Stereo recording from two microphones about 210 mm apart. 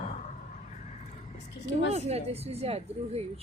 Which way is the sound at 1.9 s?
30° right (ahead or behind).